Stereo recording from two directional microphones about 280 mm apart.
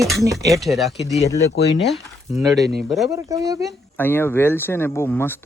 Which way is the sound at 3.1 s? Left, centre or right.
Centre.